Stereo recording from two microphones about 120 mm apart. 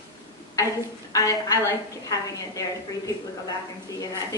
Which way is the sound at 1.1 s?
25° left (ahead or behind).